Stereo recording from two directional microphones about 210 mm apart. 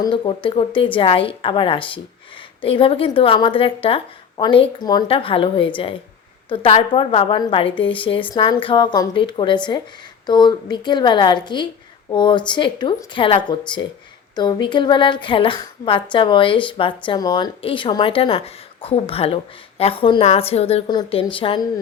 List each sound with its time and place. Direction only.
0.0 s a woman's voice: 25° left (ahead or behind)